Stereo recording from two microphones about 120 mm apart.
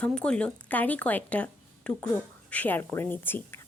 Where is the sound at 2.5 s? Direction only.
15° left (ahead or behind).